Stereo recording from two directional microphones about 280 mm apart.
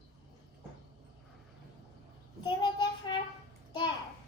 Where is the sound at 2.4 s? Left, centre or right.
Centre.